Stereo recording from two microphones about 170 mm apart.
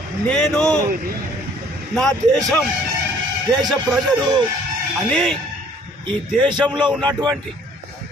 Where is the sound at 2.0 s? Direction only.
5° left (ahead or behind).